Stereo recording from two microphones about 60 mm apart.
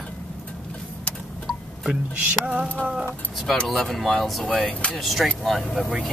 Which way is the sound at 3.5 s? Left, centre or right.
Centre.